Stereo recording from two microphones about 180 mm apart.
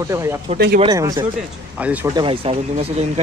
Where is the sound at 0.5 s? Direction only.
55° right (ahead or behind).